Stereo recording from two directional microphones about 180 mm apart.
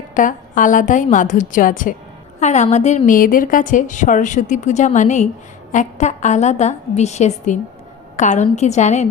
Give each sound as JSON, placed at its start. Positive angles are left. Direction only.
{"t": 0.1, "sound": "a woman's voice", "side_deg": 45}